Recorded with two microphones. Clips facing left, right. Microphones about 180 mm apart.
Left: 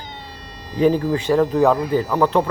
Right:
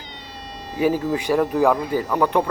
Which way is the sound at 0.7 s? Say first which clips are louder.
Left 3 dB; 10° right (ahead or behind).